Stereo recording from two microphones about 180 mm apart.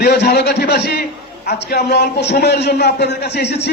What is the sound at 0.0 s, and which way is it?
A man's voice, 65° left (ahead or behind).